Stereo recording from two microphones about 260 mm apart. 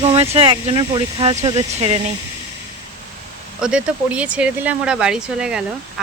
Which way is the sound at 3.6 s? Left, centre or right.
Centre.